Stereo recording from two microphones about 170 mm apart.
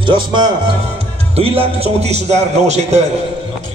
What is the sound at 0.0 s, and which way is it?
Speech, 30° right (ahead or behind).